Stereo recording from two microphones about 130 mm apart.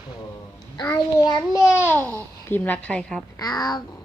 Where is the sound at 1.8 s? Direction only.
15° left (ahead or behind).